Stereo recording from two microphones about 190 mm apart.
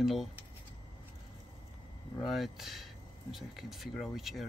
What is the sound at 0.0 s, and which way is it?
Speech, centre (ahead or behind).